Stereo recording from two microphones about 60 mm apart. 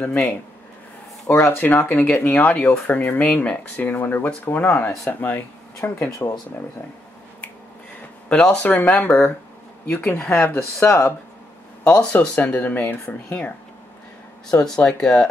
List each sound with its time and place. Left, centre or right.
0.0 s speech: left
1.2 s speech: left
1.7 s speech: left
6.0 s speech: left
8.3 s speech: centre
8.6 s speech: left
10.6 s speech: left
11.8 s speech: left
14.5 s speech: centre